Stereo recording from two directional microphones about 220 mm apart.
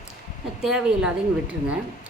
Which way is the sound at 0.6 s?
5° right (ahead or behind).